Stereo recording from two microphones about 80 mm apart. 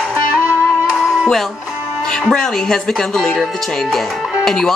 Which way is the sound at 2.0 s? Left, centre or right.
Centre.